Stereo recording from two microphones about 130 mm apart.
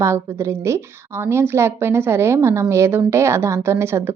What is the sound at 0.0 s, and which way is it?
A woman's voice, 20° right (ahead or behind).